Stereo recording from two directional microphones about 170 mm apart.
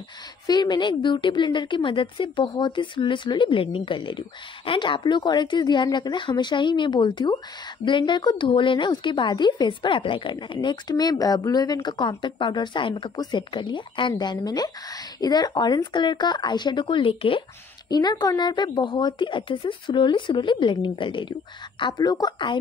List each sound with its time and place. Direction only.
0.5 s a woman's voice: 25° left (ahead or behind)